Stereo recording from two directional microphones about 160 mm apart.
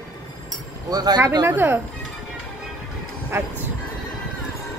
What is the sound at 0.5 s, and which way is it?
Speech, 25° right (ahead or behind).